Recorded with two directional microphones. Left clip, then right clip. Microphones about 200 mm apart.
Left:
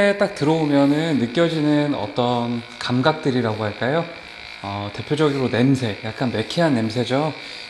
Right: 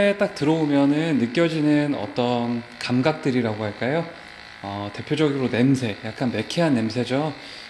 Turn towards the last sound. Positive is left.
turn(degrees=-10)  # may be behind; listen again after turning